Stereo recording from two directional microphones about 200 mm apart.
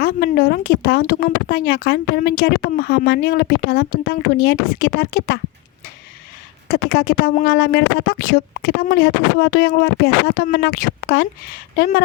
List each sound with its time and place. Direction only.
0.0 s speech: 50° left (ahead or behind)
6.7 s speech: 50° left (ahead or behind)